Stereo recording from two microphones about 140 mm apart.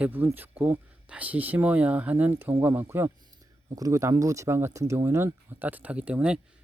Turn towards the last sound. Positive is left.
turn(degrees=-10)  # may be behind; listen again after turning